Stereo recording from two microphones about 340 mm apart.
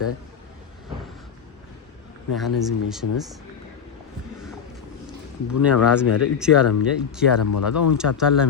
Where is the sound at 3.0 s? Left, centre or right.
Left.